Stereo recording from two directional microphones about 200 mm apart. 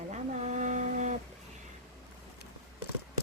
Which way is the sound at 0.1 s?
35° right (ahead or behind).